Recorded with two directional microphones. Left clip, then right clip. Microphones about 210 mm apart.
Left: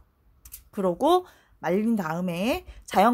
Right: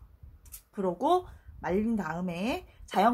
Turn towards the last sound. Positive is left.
turn(degrees=50)  # may be behind; listen again after turning